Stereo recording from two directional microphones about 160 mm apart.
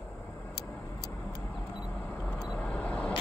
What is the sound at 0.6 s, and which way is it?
Vehicle, 90° left.